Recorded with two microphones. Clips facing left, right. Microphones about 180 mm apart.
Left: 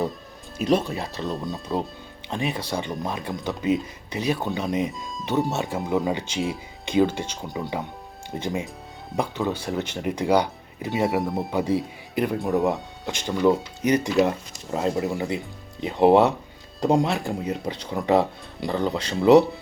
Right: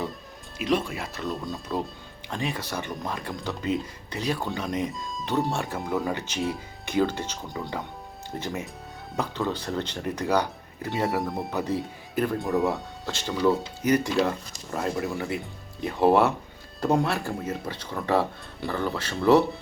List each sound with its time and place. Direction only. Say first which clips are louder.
0.9 s speech: left 4 dB; 35° left (ahead or behind)
1.2 s speech: left 2 dB; 20° left (ahead or behind)
11.2 s speech: left 4 dB; 5° left (ahead or behind)